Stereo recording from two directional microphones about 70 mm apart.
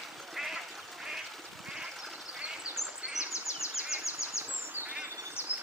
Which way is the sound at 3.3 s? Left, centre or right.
Left.